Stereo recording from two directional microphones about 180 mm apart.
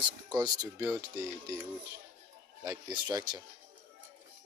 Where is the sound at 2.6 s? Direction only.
25° right (ahead or behind).